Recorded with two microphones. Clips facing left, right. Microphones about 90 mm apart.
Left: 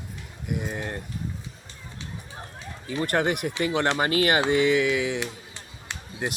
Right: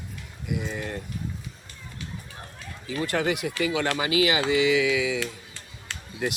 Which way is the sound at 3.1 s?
55° left (ahead or behind).